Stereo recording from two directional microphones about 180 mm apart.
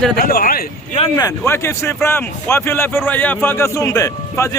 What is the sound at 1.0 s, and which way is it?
Speech, 20° left (ahead or behind).